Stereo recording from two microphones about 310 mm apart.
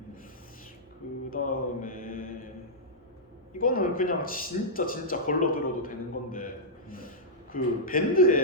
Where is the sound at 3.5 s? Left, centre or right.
Left.